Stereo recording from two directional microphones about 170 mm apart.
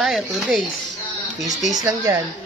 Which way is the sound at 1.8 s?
20° right (ahead or behind).